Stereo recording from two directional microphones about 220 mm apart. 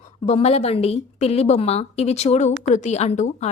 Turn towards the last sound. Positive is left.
turn(degrees=30)  # may be behind; listen again after turning